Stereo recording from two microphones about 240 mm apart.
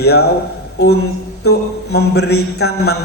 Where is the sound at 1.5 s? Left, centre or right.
Left.